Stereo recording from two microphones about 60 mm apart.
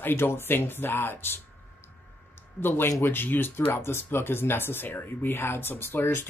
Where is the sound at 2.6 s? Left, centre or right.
Left.